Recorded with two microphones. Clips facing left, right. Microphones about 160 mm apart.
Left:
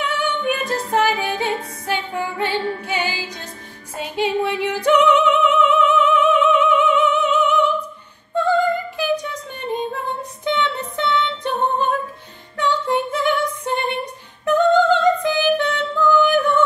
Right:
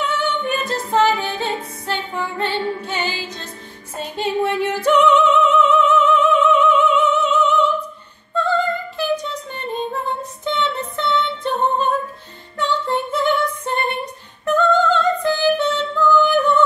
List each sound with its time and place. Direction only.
0.4 s music: 15° left (ahead or behind)
6.4 s opera: 15° left (ahead or behind)
8.4 s female singing: 15° left (ahead or behind)
10.4 s music: 15° left (ahead or behind)